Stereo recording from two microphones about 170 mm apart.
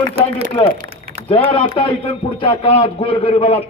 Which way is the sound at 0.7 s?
60° right (ahead or behind).